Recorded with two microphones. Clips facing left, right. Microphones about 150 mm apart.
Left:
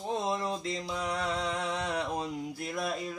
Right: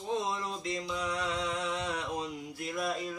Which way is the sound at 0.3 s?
35° left (ahead or behind).